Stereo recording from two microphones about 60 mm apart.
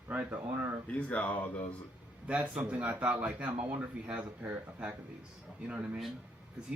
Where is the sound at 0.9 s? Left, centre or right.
Left.